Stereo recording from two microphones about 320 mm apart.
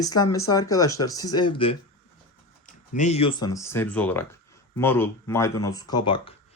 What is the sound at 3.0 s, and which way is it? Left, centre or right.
Speech, centre.